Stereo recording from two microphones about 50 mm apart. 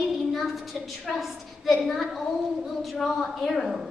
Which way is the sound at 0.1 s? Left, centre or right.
Centre.